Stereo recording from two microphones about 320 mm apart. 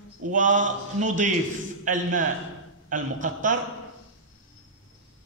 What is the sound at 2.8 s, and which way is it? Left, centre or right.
Speech, right.